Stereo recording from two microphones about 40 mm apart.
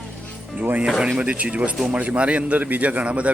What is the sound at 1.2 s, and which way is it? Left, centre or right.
A man's voice, right.